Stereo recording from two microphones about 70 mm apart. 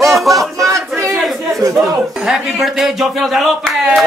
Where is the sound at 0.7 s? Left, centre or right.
Right.